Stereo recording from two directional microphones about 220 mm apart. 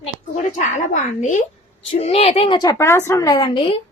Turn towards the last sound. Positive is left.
turn(degrees=25)  # may be behind; listen again after turning